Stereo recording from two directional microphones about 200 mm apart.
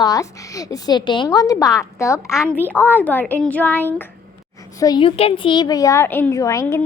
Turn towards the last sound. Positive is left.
turn(degrees=15)  # may be behind; listen again after turning